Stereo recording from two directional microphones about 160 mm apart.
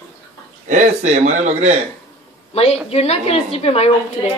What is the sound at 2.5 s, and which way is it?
A woman's voice, 40° left (ahead or behind).